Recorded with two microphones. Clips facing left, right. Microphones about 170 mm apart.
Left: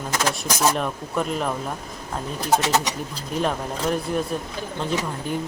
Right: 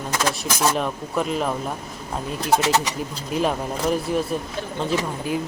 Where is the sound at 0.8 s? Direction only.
Centre (ahead or behind).